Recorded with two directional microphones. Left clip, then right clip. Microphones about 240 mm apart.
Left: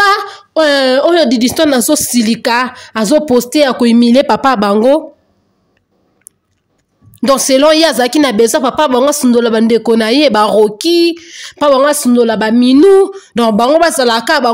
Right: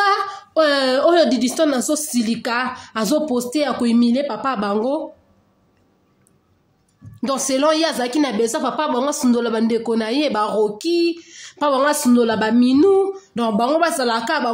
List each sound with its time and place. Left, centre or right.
0.0 s a woman's voice: left
7.2 s speech: left